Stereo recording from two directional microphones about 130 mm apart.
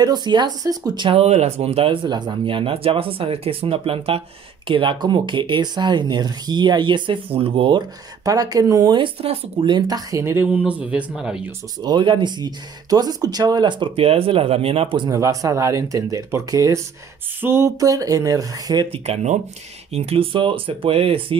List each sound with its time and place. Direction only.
0.0 s speech: 35° right (ahead or behind)
1.2 s speech: 55° right (ahead or behind)
8.3 s speech: 30° right (ahead or behind)
8.9 s speech: 45° right (ahead or behind); by 11.5 s 5° right (ahead or behind)
11.8 s speech: 35° right (ahead or behind)
15.0 s speech: 25° right (ahead or behind)
18.9 s speech: 55° right (ahead or behind)